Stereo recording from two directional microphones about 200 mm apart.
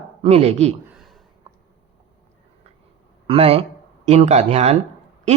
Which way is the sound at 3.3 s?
30° right (ahead or behind).